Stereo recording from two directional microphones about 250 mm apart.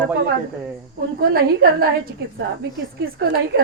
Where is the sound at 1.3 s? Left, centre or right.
Right.